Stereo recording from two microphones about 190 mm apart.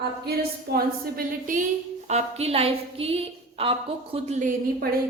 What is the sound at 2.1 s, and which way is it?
A woman's voice, 30° right (ahead or behind).